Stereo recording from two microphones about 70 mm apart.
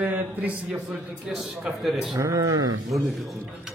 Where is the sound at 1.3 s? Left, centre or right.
Centre.